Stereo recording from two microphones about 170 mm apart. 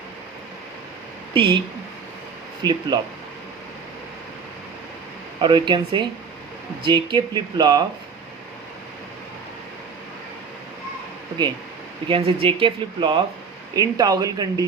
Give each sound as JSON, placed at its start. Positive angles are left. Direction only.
{"t": 1.3, "sound": "speech", "side_deg": -30}
{"t": 2.6, "sound": "speech", "side_deg": 15}
{"t": 5.4, "sound": "speech", "side_deg": -25}
{"t": 12.0, "sound": "speech", "side_deg": -30}